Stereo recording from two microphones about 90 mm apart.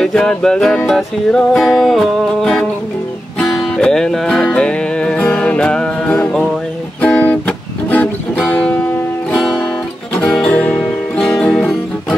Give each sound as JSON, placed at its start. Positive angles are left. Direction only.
{"t": 0.0, "sound": "music", "side_deg": 5}
{"t": 10.1, "sound": "music", "side_deg": 10}